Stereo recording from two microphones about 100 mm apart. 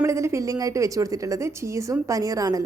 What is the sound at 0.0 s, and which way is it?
A woman's voice, 30° right (ahead or behind).